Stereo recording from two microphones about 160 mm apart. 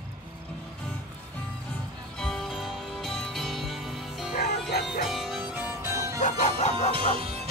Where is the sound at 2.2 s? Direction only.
Centre (ahead or behind).